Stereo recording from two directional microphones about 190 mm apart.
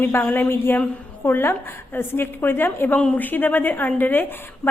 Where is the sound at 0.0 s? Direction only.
10° left (ahead or behind).